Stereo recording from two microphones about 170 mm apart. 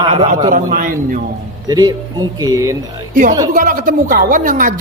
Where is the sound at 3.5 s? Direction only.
55° right (ahead or behind).